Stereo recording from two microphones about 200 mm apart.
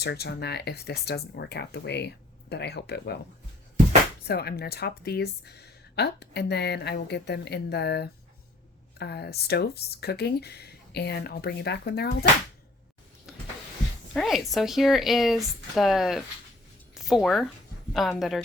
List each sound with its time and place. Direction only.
0.0 s a woman's voice: 55° left (ahead or behind)
4.3 s a woman's voice: 50° left (ahead or behind)
13.3 s power windows: centre (ahead or behind)
14.1 s speech: centre (ahead or behind)